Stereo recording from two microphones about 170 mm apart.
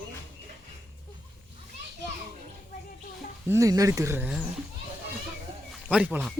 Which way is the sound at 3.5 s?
20° right (ahead or behind).